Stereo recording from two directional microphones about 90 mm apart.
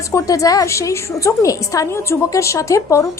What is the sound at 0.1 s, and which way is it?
A woman's voice, 40° left (ahead or behind).